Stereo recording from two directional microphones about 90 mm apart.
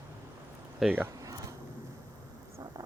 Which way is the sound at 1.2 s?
40° right (ahead or behind).